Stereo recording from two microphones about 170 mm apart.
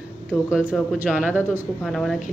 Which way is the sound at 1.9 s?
Centre (ahead or behind).